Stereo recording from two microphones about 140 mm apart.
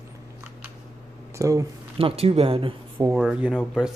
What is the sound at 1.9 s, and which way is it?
Speech, 45° right (ahead or behind).